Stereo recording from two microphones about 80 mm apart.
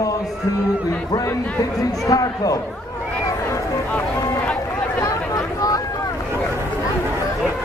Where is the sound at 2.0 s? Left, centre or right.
Left.